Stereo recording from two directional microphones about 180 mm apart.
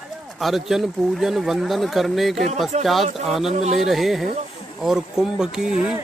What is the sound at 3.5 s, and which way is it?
Speech, 40° right (ahead or behind).